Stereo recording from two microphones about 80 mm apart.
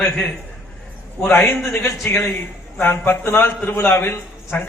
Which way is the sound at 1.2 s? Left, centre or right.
Left.